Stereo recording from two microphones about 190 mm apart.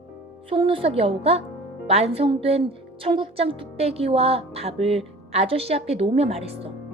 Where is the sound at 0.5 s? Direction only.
30° right (ahead or behind).